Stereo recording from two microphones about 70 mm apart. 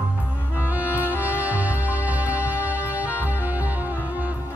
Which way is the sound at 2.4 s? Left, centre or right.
Left.